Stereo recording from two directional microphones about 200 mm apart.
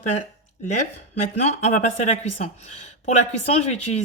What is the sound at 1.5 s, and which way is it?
Speech, 35° left (ahead or behind).